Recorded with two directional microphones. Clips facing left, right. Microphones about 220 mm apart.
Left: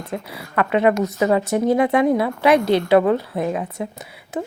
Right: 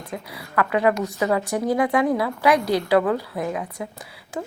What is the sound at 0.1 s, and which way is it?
A woman's voice, 25° left (ahead or behind).